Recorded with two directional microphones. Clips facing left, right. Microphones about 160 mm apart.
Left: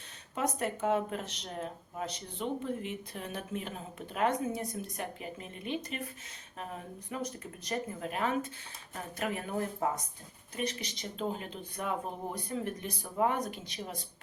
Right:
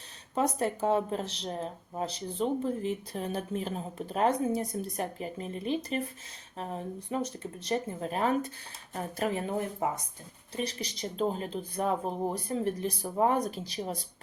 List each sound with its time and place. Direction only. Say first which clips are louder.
0.3 s speech: right 4 dB; 30° right (ahead or behind)
9.8 s speech: even; 15° right (ahead or behind)
10.5 s speech: right 2 dB; 35° right (ahead or behind)